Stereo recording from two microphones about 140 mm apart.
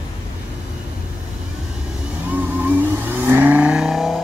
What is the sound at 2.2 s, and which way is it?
Vehicle, 15° right (ahead or behind).